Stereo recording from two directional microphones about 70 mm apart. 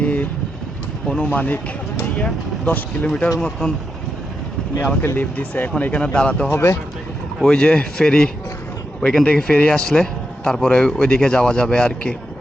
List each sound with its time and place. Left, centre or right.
0.0 s vehicle: left
1.0 s speech: centre
5.0 s a man's voice: left
6.5 s speech: left
7.4 s a man's voice: centre